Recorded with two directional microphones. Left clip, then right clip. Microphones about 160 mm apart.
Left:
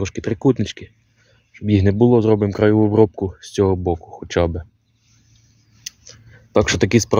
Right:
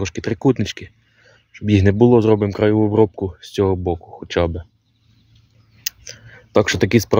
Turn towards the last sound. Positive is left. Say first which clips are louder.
# even
turn(degrees=-5)  # may be behind; listen again after turning